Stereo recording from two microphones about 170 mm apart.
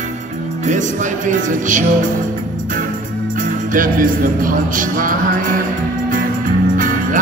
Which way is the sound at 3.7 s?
55° right (ahead or behind).